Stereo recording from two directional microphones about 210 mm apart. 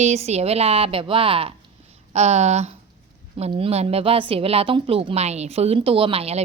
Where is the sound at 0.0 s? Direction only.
30° right (ahead or behind).